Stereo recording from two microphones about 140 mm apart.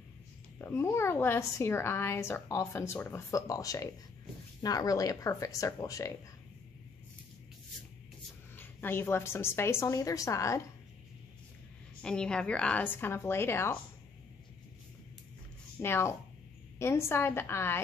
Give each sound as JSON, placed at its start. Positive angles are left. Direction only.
{"t": 0.6, "sound": "a woman's voice", "side_deg": 15}
{"t": 8.5, "sound": "a woman's voice", "side_deg": 15}
{"t": 12.0, "sound": "a woman's voice", "side_deg": 5}
{"t": 15.8, "sound": "a woman's voice", "side_deg": 20}